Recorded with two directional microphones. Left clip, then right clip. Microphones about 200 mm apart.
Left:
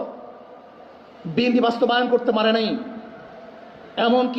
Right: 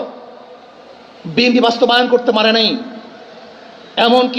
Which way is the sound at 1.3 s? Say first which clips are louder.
Right 7 dB; 25° right (ahead or behind).